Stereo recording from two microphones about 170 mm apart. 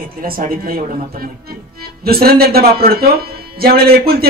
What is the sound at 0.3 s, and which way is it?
Speech, 55° right (ahead or behind).